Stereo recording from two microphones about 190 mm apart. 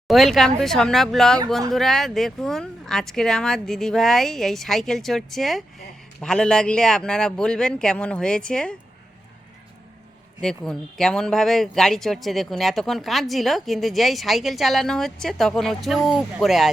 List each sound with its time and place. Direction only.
0.1 s speech: centre (ahead or behind)
10.4 s speech: 5° left (ahead or behind)